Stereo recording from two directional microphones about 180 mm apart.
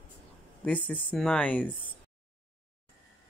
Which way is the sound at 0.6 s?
10° left (ahead or behind).